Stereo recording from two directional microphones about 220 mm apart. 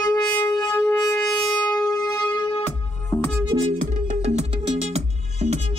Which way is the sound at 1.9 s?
20° left (ahead or behind).